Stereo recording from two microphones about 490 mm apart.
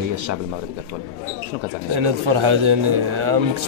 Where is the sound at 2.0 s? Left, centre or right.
Right.